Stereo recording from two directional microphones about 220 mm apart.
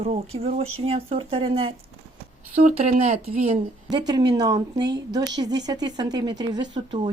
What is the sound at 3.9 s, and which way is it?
A woman's voice, 20° right (ahead or behind).